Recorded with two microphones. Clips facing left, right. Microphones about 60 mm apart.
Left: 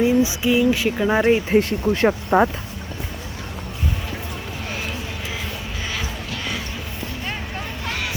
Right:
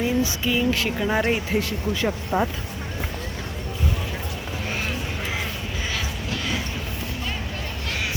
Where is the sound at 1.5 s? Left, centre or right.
Left.